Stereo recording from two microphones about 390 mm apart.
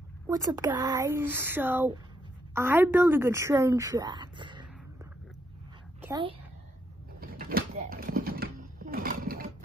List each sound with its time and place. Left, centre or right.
0.3 s a woman's voice: centre
5.9 s speech: centre
7.2 s a sound: right